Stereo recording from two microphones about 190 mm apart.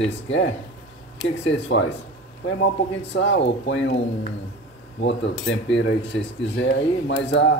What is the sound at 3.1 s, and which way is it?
Speech, 70° left (ahead or behind).